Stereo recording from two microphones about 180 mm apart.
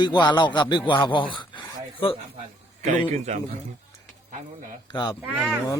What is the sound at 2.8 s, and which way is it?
Speech, 40° right (ahead or behind).